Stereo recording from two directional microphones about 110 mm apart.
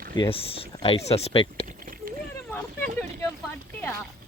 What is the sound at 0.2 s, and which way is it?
Speech, 60° left (ahead or behind).